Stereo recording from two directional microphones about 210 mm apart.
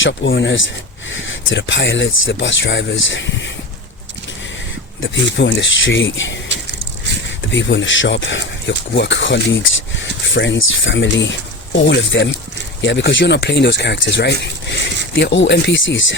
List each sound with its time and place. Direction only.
0.0 s speech: 60° left (ahead or behind)
4.9 s speech: 60° left (ahead or behind)
6.5 s a sound: 55° right (ahead or behind)
7.3 s speech: 60° left (ahead or behind)